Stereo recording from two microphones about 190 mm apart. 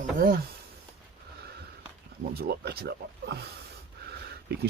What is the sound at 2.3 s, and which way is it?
Speech, 55° right (ahead or behind).